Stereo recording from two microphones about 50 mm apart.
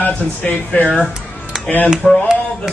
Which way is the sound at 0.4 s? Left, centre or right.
Left.